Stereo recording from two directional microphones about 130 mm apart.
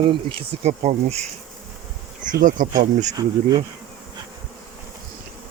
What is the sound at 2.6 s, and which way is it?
Speech, 90° right.